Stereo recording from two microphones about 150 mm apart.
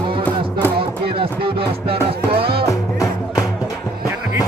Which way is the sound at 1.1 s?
35° right (ahead or behind).